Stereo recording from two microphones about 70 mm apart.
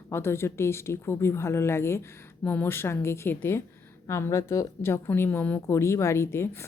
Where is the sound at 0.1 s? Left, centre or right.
Left.